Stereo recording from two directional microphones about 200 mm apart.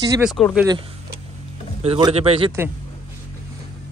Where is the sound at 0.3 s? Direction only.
Centre (ahead or behind).